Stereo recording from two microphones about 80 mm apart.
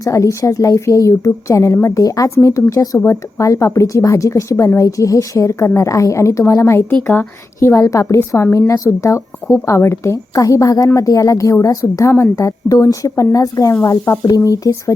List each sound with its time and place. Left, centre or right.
0.0 s a woman's voice: left
7.1 s speech: left
7.7 s a woman's voice: left